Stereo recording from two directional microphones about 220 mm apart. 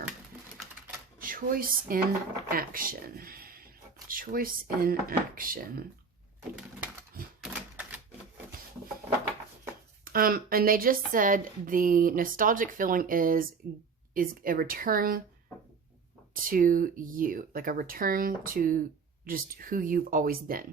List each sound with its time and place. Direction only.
1.2 s speech: 40° right (ahead or behind)
7.4 s typewriter: 5° right (ahead or behind)
10.0 s speech: 40° right (ahead or behind)
16.3 s speech: 40° right (ahead or behind)